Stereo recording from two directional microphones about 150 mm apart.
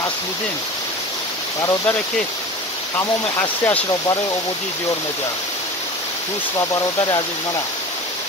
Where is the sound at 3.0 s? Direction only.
15° left (ahead or behind).